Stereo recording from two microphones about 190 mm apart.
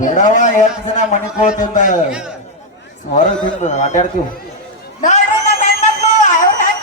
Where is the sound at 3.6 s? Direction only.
35° left (ahead or behind).